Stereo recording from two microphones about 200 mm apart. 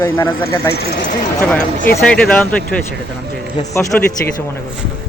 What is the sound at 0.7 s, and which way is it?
Speech, 55° left (ahead or behind).